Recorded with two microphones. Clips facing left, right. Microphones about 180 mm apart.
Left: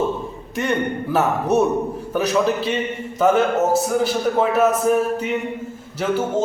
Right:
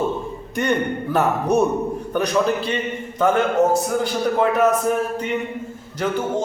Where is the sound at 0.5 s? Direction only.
Centre (ahead or behind).